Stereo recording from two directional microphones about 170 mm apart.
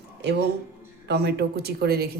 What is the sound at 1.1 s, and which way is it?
Speech, 70° right (ahead or behind).